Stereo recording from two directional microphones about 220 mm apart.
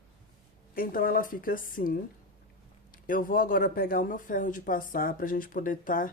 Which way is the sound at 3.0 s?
40° left (ahead or behind).